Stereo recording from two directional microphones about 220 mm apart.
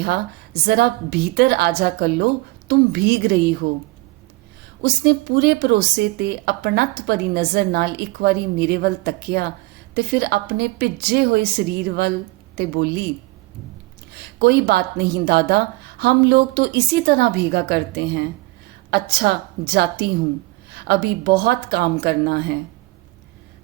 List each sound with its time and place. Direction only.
0.0 s a woman's voice: 45° right (ahead or behind)
4.8 s a woman's voice: 45° right (ahead or behind)
14.1 s a woman's voice: 45° right (ahead or behind)